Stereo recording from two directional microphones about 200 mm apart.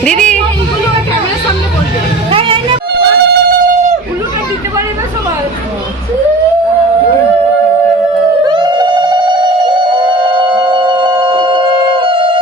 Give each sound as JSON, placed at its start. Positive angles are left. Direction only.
{"t": 0.0, "sound": "music", "side_deg": 5}
{"t": 2.3, "sound": "music", "side_deg": -25}
{"t": 2.9, "sound": "a sound", "side_deg": -55}
{"t": 8.4, "sound": "music", "side_deg": -25}